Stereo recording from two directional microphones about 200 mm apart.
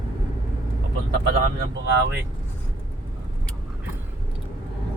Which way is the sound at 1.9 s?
60° right (ahead or behind).